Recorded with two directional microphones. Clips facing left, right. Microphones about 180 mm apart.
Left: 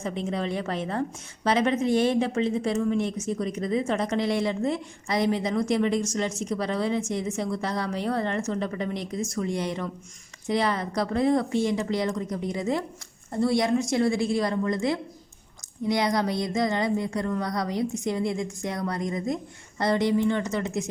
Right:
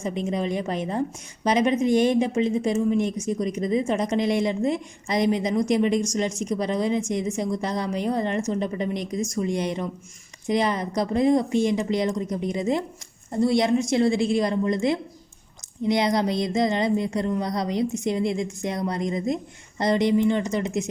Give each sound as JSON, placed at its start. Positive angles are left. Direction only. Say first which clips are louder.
{"t": 0.0, "sound": "a woman's voice", "louder": "right 3 dB", "side_deg": -15}